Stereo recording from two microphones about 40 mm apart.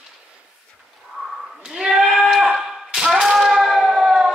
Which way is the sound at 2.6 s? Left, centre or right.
Centre.